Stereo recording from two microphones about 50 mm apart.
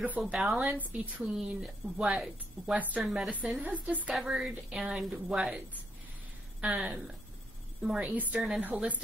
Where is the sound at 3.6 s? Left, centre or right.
Right.